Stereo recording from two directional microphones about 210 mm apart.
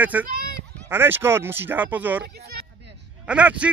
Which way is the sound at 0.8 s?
10° right (ahead or behind).